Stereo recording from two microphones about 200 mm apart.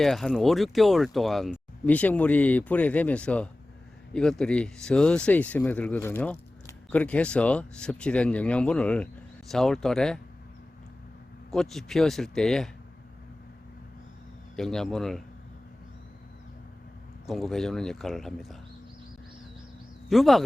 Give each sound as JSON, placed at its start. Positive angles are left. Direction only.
{"t": 0.0, "sound": "speech", "side_deg": 0}
{"t": 11.5, "sound": "speech", "side_deg": 0}
{"t": 14.5, "sound": "speech", "side_deg": 5}
{"t": 17.2, "sound": "speech", "side_deg": 0}
{"t": 20.1, "sound": "speech", "side_deg": 0}